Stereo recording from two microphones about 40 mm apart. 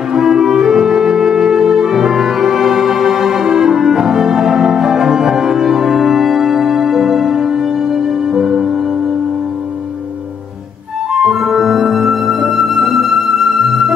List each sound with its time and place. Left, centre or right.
0.1 s music: centre
11.1 s flute: centre